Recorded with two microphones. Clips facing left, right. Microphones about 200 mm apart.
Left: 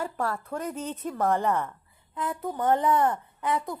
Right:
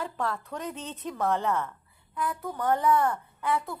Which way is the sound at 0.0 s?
10° left (ahead or behind).